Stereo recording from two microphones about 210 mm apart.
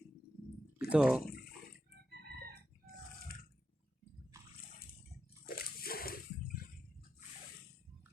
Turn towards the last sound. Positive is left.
turn(degrees=45)  # may be behind; listen again after turning